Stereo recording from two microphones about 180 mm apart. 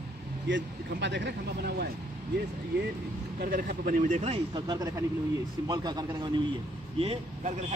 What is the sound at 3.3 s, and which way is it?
Speech, 55° right (ahead or behind).